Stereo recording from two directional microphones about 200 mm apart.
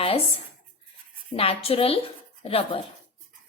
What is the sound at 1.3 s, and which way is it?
A woman's voice, 30° left (ahead or behind).